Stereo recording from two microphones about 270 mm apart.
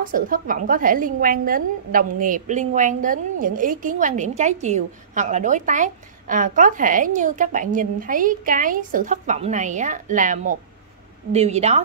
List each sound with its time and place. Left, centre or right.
0.0 s a woman's voice: right